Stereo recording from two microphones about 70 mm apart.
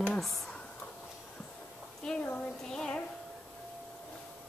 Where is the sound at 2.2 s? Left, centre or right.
Left.